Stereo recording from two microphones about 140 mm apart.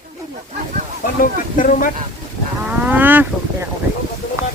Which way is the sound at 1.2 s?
80° left.